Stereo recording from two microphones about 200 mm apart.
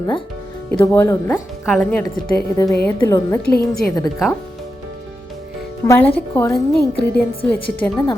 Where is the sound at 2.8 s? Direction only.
15° left (ahead or behind).